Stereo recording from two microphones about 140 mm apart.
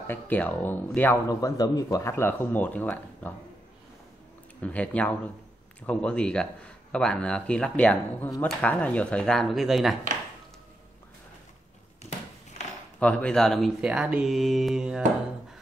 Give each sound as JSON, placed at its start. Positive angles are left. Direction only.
{"t": 0.0, "sound": "speech", "side_deg": 15}
{"t": 1.3, "sound": "speech", "side_deg": 25}
{"t": 4.6, "sound": "speech", "side_deg": 10}
{"t": 13.0, "sound": "speech", "side_deg": 10}